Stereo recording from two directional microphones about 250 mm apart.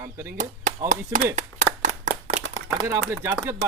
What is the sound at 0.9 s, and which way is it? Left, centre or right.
Speech, right.